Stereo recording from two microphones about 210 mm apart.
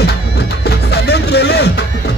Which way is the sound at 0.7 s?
50° left (ahead or behind).